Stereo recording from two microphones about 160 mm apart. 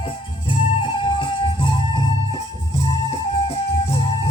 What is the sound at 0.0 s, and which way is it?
Music, 30° left (ahead or behind).